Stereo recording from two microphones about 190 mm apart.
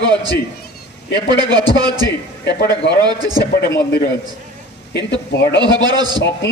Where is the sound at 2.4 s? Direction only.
65° left (ahead or behind).